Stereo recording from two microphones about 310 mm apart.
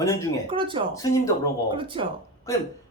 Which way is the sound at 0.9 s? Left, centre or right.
Centre.